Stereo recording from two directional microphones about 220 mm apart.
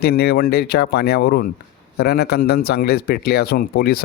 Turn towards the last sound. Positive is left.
turn(degrees=45)  # may be behind; listen again after turning